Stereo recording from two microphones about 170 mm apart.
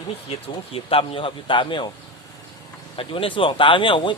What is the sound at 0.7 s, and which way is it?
Speech, 35° left (ahead or behind).